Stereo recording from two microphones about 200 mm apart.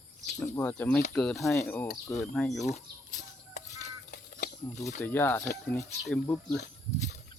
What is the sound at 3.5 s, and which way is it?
Music, 35° left (ahead or behind).